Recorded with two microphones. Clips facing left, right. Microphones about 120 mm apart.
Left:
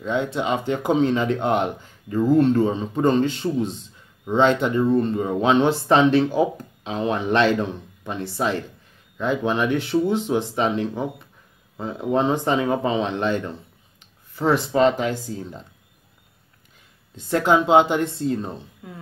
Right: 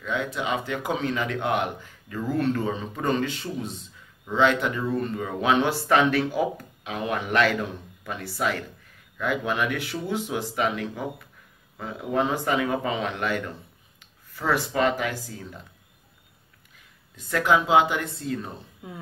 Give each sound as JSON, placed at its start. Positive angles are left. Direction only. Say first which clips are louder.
{"t": 0.0, "sound": "speech", "louder": "left 5 dB", "side_deg": 30}
{"t": 17.1, "sound": "speech", "louder": "left 3 dB", "side_deg": 30}
{"t": 18.8, "sound": "music", "louder": "right 3 dB", "side_deg": -20}